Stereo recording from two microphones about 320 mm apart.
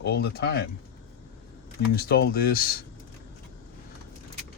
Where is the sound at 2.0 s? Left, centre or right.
Left.